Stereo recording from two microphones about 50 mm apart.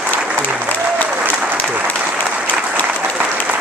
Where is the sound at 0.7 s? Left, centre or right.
Left.